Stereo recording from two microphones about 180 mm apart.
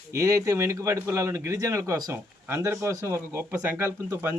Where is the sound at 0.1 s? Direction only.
15° right (ahead or behind).